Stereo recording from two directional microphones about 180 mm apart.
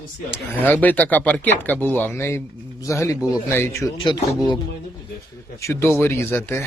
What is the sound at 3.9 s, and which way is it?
Speech, 25° left (ahead or behind).